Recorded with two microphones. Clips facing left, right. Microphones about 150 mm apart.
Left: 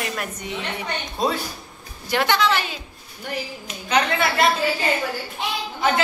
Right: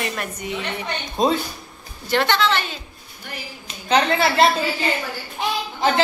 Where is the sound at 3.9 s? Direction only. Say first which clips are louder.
Right 3 dB; 30° right (ahead or behind).